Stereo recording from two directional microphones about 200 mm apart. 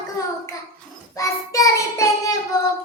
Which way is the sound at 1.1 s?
15° left (ahead or behind).